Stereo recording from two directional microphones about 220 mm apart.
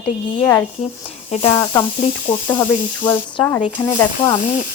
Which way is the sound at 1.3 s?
25° left (ahead or behind).